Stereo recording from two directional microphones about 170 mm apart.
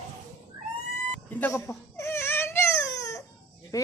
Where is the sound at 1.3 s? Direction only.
15° left (ahead or behind).